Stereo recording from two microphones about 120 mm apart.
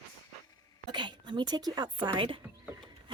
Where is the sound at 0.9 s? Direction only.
40° right (ahead or behind).